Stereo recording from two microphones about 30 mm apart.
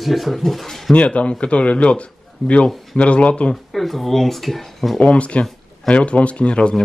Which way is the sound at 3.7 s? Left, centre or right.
Centre.